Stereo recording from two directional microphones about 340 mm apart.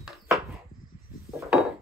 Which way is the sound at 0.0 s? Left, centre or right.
Centre.